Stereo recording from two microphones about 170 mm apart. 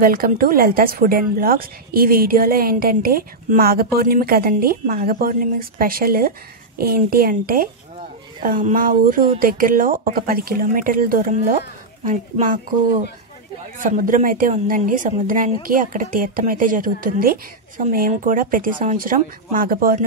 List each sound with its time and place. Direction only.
0.0 s a woman's voice: 60° right (ahead or behind)